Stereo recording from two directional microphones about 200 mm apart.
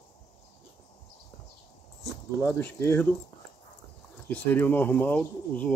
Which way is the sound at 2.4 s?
10° left (ahead or behind).